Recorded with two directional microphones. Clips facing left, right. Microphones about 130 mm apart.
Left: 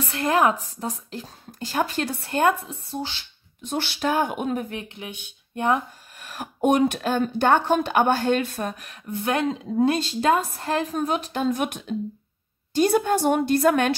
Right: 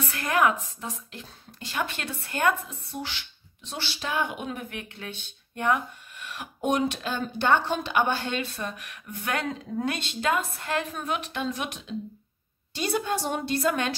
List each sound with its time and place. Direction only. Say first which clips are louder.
0.1 s speech: left 4 dB; 30° left (ahead or behind)
3.6 s speech: left 9 dB; 55° left (ahead or behind)
4.7 s speech: left 4 dB; 25° left (ahead or behind)
5.0 s speech: left 2 dB; 15° left (ahead or behind)
5.5 s speech: left 3 dB; 25° left (ahead or behind)
6.1 s speech: left 4 dB; 40° left (ahead or behind)
8.7 s a woman's voice: left 8 dB; 35° left (ahead or behind); by 13.9 s 55° left (ahead or behind)